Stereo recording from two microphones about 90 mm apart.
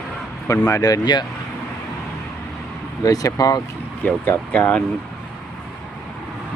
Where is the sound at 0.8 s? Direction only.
50° left (ahead or behind).